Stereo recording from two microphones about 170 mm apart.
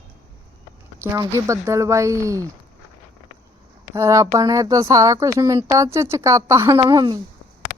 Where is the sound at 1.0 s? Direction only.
15° right (ahead or behind).